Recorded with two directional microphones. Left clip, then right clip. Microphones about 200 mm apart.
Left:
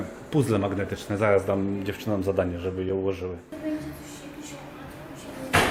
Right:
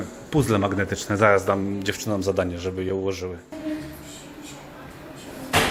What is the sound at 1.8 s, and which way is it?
Speech, 40° right (ahead or behind).